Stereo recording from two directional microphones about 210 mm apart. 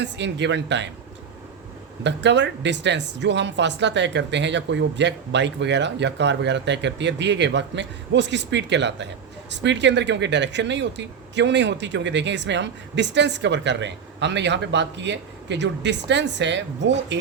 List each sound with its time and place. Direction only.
0.0 s speech: 55° right (ahead or behind)
2.0 s speech: 55° right (ahead or behind)